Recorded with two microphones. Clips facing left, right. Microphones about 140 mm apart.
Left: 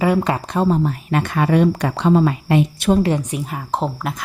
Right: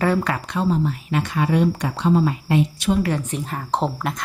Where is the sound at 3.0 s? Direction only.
15° left (ahead or behind).